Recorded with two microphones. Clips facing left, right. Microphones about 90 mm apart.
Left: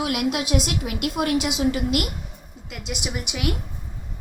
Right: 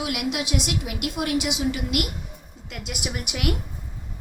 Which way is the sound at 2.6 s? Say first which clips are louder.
Left 1 dB; centre (ahead or behind).